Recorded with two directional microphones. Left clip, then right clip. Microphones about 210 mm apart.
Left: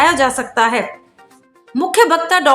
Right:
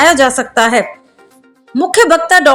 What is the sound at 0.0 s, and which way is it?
Speech, 25° right (ahead or behind).